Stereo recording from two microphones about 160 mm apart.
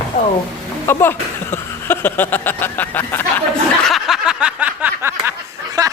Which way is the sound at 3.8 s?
Centre (ahead or behind).